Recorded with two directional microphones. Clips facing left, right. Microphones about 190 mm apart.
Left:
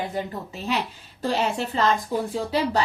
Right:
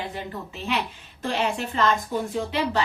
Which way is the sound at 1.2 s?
35° left (ahead or behind).